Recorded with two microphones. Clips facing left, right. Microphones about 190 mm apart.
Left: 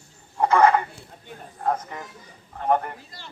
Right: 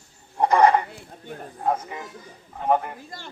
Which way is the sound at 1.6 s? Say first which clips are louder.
Right 1 dB; 10° right (ahead or behind).